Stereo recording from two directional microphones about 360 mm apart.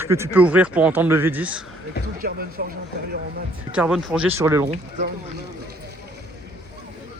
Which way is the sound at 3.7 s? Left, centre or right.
Centre.